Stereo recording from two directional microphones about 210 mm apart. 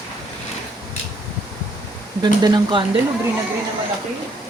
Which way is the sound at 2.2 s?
20° right (ahead or behind).